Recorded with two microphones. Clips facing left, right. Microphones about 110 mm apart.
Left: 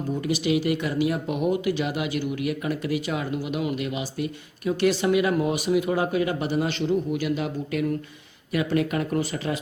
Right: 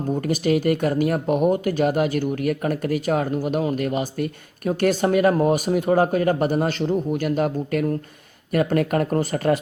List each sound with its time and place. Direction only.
0.1 s speech: 45° right (ahead or behind)